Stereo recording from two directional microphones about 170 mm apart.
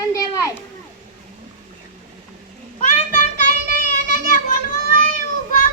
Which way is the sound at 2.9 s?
45° left (ahead or behind).